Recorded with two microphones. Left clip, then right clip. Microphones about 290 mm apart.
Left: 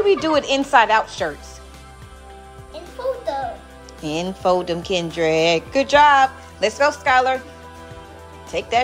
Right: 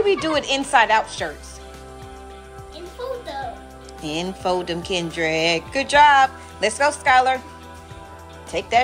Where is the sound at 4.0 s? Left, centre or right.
Centre.